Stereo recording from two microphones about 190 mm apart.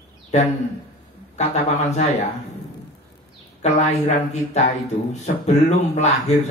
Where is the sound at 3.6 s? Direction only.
40° left (ahead or behind).